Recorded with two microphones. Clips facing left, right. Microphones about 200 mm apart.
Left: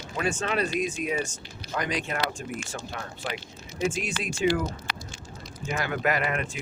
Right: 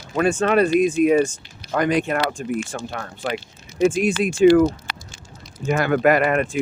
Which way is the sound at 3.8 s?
55° right (ahead or behind).